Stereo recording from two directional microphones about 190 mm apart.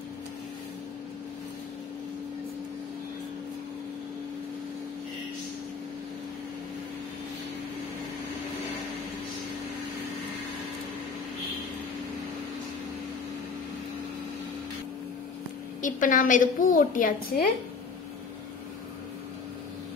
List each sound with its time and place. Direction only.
15.8 s a woman's voice: 45° left (ahead or behind)